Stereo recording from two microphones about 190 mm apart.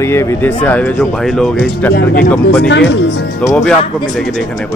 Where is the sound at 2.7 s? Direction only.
70° left (ahead or behind).